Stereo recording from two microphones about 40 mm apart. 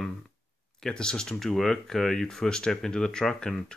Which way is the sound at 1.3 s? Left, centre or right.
Centre.